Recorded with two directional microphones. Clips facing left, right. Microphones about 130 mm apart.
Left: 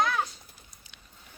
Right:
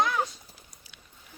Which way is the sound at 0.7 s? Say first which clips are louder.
Right 1 dB; 5° right (ahead or behind).